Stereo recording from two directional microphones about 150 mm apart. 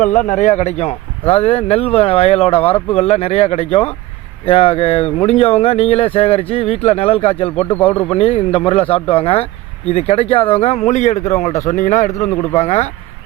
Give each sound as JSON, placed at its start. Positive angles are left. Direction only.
{"t": 0.0, "sound": "speech", "side_deg": 55}
{"t": 7.7, "sound": "speech", "side_deg": 10}
{"t": 8.1, "sound": "a man's voice", "side_deg": 40}